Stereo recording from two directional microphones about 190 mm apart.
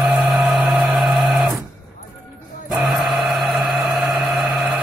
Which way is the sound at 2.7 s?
Centre (ahead or behind).